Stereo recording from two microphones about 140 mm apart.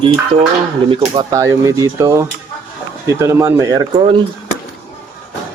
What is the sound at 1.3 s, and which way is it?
Speech, 20° right (ahead or behind).